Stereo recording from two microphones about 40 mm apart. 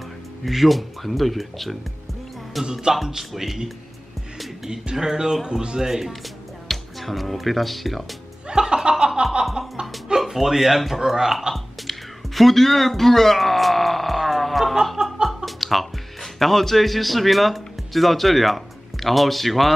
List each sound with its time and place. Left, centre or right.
0.5 s speech: centre
2.7 s speech: centre
4.9 s speech: centre
5.8 s speech: centre
6.7 s speech: centre
8.5 s chuckle: centre
9.8 s music: right
10.2 s speech: centre
11.5 s music: centre
15.2 s speech: centre